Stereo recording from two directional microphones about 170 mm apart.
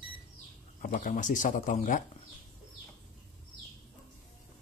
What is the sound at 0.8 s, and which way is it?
Speech, 50° left (ahead or behind).